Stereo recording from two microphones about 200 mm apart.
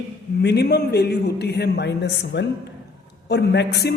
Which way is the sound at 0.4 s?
55° left (ahead or behind).